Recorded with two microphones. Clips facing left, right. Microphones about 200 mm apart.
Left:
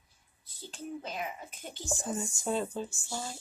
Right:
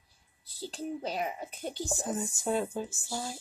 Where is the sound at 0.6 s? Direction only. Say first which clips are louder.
Right 5 dB; 35° right (ahead or behind).